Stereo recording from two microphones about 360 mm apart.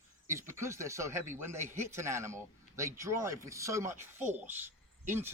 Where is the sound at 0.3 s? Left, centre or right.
Centre.